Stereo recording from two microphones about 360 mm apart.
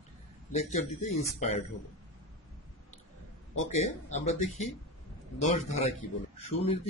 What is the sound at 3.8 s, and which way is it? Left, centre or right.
Speech, centre.